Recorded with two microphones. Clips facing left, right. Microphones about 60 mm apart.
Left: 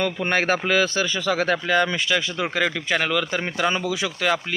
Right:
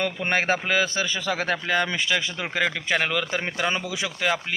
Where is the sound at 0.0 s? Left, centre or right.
Centre.